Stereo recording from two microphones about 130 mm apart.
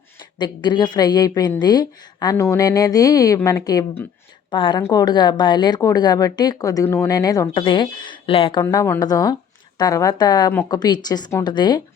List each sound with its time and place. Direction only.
0.3 s a woman's voice: 35° left (ahead or behind); by 7.1 s 20° left (ahead or behind)
7.1 s a woman's voice: 30° left (ahead or behind)
7.4 s a woman's voice: 40° left (ahead or behind)
8.6 s a woman's voice: 20° left (ahead or behind)